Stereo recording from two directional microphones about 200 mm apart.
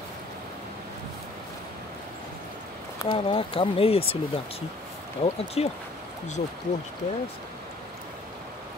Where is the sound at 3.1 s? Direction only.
25° left (ahead or behind).